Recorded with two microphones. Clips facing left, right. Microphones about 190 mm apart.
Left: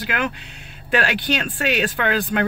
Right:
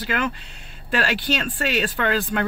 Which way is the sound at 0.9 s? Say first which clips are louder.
Left 2 dB; 55° left (ahead or behind).